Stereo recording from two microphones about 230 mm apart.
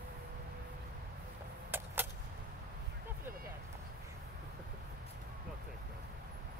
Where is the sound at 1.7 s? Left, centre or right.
Centre.